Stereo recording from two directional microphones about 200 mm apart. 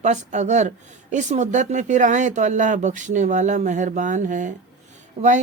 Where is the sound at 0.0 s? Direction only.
35° right (ahead or behind).